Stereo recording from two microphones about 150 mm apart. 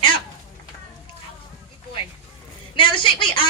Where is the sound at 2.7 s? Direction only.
35° left (ahead or behind).